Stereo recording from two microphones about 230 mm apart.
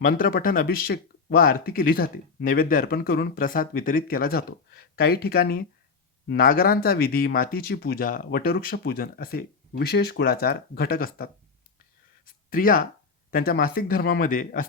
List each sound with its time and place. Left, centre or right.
0.0 s speech: left
12.5 s speech: left